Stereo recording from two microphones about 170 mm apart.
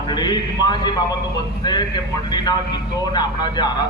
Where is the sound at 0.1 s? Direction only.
25° left (ahead or behind).